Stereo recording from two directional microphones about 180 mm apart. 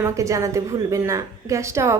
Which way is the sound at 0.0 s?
15° right (ahead or behind).